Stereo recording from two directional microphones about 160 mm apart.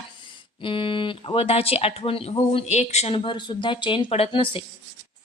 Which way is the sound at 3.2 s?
30° left (ahead or behind).